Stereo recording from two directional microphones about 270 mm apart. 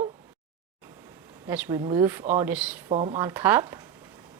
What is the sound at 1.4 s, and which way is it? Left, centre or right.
Speech, centre.